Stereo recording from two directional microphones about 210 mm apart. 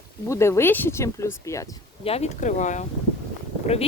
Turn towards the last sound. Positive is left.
turn(degrees=30)  # may be behind; listen again after turning